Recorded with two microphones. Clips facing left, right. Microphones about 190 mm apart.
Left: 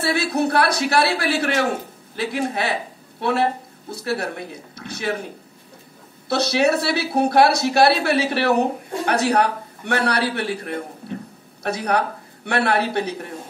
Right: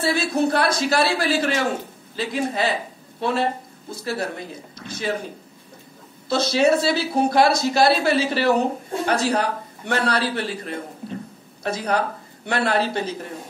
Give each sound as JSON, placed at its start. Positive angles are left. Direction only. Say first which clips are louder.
{"t": 0.0, "sound": "a man's voice", "louder": "even", "side_deg": 65}
{"t": 6.2, "sound": "a man's voice", "louder": "even", "side_deg": 65}